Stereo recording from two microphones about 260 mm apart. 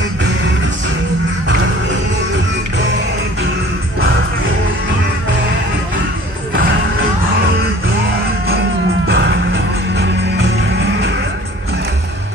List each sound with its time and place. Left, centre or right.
9.0 s music: right